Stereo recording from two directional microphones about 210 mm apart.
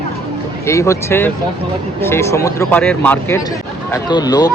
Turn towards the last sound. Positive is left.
turn(degrees=20)  # may be behind; listen again after turning